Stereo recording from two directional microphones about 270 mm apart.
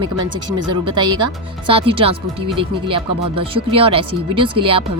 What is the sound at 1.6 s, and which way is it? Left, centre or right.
Speech, centre.